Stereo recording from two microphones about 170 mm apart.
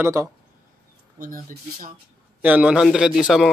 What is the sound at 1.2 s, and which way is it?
Speech, 50° right (ahead or behind).